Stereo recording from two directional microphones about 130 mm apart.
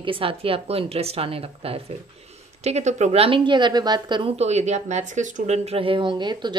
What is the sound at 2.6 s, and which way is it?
Speech, 60° right (ahead or behind).